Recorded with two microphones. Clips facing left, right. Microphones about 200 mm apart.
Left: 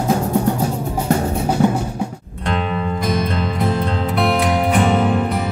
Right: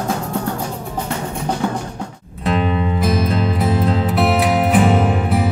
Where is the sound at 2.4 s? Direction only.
Centre (ahead or behind).